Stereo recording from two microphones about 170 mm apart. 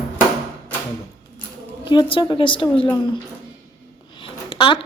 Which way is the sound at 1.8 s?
30° left (ahead or behind).